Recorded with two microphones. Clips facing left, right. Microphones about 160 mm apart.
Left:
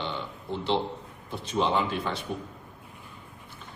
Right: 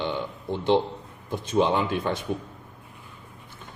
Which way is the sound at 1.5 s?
55° right (ahead or behind).